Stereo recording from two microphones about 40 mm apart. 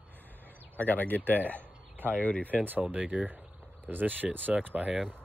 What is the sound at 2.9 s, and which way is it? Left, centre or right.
Speech, right.